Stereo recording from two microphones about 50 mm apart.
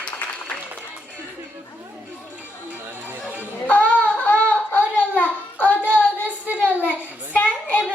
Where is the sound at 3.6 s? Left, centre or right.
Left.